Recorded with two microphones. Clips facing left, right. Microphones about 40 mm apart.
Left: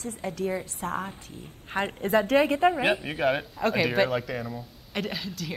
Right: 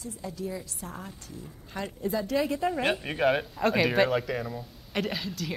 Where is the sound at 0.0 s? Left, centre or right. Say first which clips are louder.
Left 5 dB; left.